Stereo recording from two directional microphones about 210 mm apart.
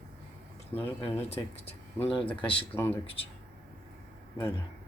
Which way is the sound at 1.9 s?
5° left (ahead or behind).